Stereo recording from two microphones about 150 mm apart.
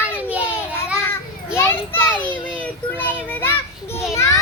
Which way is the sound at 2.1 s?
10° left (ahead or behind).